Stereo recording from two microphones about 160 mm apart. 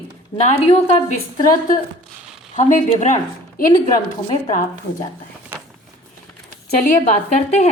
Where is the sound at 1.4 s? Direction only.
60° left (ahead or behind).